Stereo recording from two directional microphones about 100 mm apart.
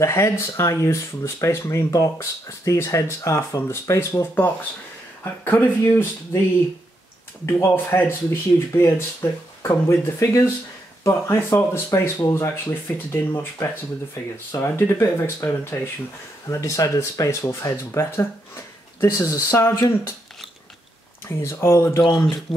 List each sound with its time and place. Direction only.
0.0 s speech: 30° left (ahead or behind)
7.4 s speech: 25° left (ahead or behind)
21.3 s speech: 25° left (ahead or behind)